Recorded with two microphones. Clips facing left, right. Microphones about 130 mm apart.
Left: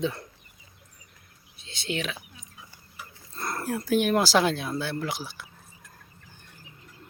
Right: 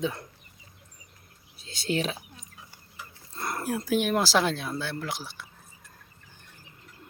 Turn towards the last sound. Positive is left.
turn(degrees=0)  # may be behind; listen again after turning